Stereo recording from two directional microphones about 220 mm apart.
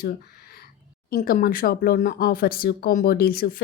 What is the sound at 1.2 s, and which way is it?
Speech, 40° left (ahead or behind).